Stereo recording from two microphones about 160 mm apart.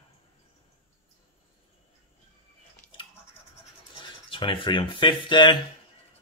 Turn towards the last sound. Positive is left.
turn(degrees=30)  # may be behind; listen again after turning